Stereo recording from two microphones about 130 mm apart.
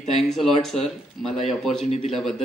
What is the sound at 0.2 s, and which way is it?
Speech, centre (ahead or behind).